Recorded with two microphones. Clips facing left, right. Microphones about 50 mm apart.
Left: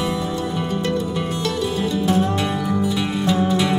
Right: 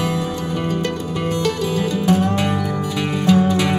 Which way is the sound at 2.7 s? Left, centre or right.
Right.